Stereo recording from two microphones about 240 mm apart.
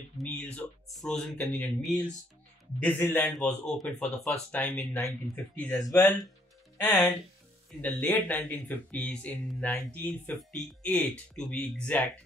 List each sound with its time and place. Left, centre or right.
0.2 s speech: centre